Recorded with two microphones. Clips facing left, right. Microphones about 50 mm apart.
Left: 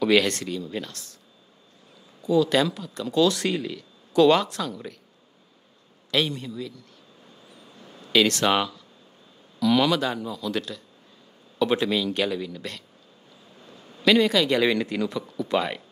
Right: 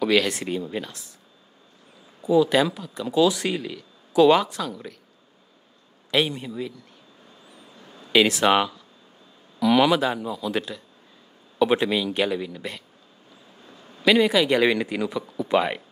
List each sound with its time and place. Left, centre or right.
0.0 s speech: centre
2.2 s speech: centre
6.0 s speech: centre
8.1 s a man's voice: centre